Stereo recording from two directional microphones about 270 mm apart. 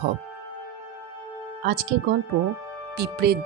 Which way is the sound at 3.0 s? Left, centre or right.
Right.